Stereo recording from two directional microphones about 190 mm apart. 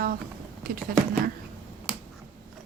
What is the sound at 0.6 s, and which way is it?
Speech, 50° right (ahead or behind).